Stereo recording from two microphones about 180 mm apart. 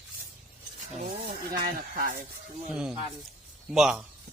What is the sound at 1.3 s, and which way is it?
Speech, 55° right (ahead or behind).